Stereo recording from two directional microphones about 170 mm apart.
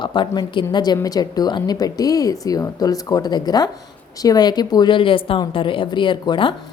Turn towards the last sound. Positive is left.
turn(degrees=30)  # may be behind; listen again after turning